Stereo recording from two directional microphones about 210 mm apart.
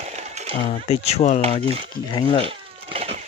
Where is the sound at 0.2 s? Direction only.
30° right (ahead or behind).